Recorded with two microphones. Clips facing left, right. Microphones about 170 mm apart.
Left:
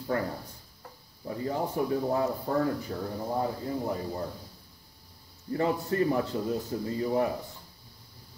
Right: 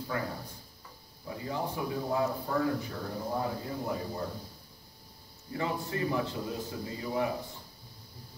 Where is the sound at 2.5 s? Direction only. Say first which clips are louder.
Left 5 dB; 35° left (ahead or behind).